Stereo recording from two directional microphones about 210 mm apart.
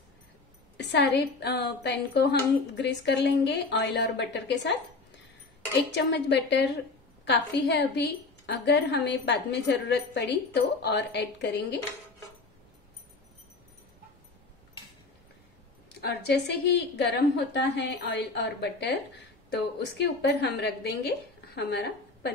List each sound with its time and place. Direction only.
0.7 s a woman's voice: 55° left (ahead or behind)
6.1 s a woman's voice: 55° left (ahead or behind)
16.0 s a woman's voice: 50° left (ahead or behind)